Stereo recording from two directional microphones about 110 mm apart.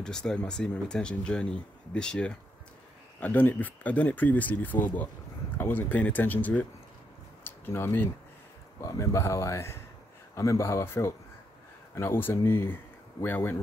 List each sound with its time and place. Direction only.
0.0 s speech: 5° left (ahead or behind)